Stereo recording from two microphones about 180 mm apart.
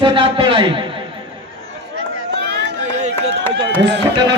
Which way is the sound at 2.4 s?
70° right (ahead or behind).